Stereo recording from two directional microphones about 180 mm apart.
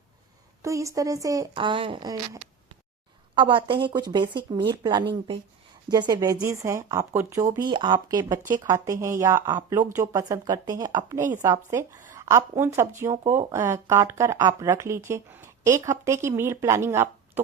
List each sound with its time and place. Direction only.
0.6 s a woman's voice: 15° right (ahead or behind)
3.3 s a woman's voice: 30° right (ahead or behind)